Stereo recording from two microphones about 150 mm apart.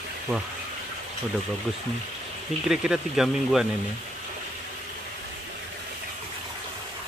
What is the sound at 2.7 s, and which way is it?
Speech, 5° right (ahead or behind).